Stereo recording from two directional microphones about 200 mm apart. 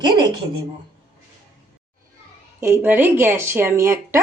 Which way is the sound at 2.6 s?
10° right (ahead or behind).